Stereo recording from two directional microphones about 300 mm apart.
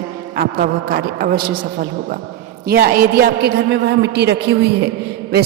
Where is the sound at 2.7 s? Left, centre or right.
Right.